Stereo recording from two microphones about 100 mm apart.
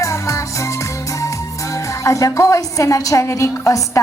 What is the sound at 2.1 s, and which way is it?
A woman's voice, 30° left (ahead or behind).